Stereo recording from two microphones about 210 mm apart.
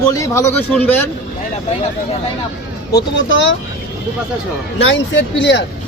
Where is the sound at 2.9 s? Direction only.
60° left (ahead or behind).